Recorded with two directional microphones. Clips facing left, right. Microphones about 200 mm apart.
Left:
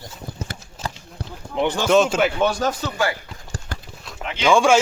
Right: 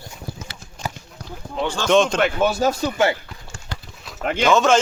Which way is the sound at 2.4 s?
5° right (ahead or behind).